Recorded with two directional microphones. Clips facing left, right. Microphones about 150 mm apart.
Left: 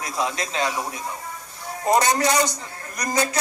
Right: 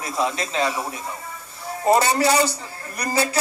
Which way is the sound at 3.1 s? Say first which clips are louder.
Right 1 dB; 35° right (ahead or behind).